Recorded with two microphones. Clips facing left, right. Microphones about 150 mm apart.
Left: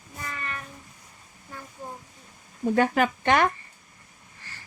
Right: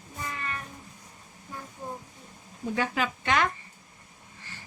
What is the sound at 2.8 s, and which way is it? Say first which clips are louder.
Speech: left 7 dB; 50° left (ahead or behind).